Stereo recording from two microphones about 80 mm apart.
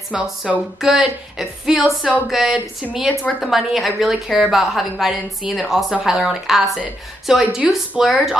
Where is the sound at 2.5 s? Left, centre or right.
Centre.